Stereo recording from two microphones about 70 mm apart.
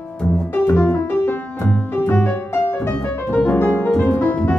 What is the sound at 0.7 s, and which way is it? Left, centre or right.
Music, left.